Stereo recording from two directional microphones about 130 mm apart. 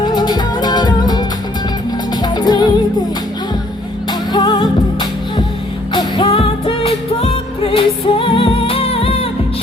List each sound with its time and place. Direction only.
0.0 s music: 35° left (ahead or behind)
2.2 s music: 30° left (ahead or behind)
4.3 s music: 35° left (ahead or behind)